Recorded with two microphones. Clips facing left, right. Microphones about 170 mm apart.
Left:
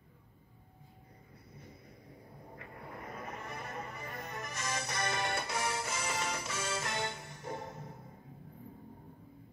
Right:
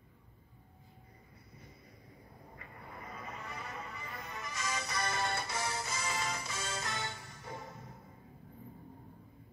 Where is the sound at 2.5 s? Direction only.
60° left (ahead or behind).